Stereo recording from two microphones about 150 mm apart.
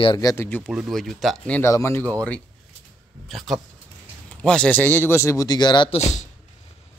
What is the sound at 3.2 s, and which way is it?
Speech, centre (ahead or behind).